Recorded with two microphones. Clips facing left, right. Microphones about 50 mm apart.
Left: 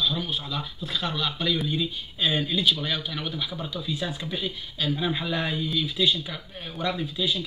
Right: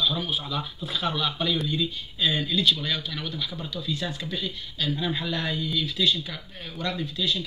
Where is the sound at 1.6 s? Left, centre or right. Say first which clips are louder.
Even; centre.